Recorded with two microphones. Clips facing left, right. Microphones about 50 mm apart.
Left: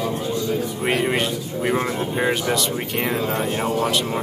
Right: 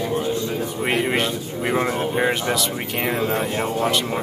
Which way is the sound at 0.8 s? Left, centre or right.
Centre.